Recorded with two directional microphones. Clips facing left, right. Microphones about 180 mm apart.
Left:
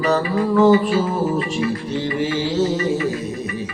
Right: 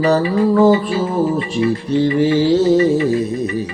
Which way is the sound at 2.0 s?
35° right (ahead or behind).